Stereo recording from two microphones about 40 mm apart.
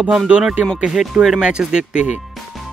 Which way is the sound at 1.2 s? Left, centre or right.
Right.